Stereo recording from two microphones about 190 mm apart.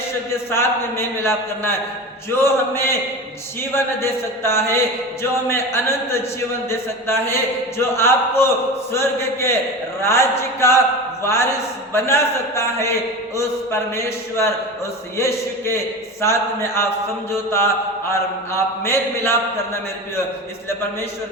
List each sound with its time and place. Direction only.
0.5 s a man's voice: 15° left (ahead or behind)